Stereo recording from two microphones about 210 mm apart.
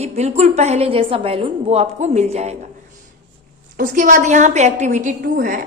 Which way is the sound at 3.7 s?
40° right (ahead or behind).